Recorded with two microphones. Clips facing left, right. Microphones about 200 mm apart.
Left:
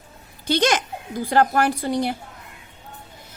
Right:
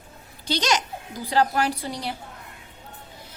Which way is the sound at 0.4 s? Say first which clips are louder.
Left 5 dB; 55° left (ahead or behind).